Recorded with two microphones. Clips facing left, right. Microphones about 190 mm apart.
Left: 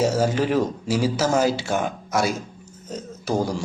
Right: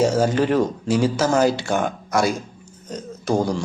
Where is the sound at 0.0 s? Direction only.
5° left (ahead or behind).